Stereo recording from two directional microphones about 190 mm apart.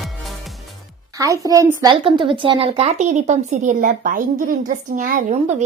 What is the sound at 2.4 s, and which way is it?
Speech, 30° right (ahead or behind).